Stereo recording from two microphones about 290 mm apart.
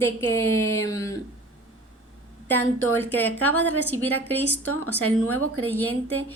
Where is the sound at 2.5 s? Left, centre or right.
Centre.